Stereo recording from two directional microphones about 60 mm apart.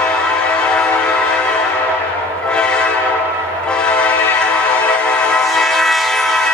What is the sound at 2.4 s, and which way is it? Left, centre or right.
Train horn, centre.